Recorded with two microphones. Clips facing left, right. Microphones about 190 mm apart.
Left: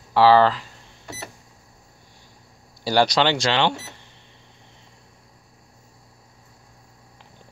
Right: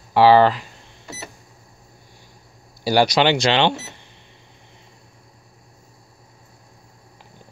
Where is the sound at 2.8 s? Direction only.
10° right (ahead or behind).